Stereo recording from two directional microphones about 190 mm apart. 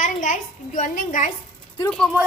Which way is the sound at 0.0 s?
40° left (ahead or behind).